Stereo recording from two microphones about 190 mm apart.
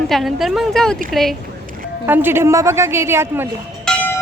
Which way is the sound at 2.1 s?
10° right (ahead or behind).